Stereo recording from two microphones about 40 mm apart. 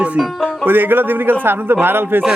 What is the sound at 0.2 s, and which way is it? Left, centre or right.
Speech, centre.